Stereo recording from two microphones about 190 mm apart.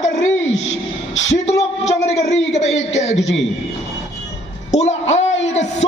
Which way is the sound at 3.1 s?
75° left (ahead or behind).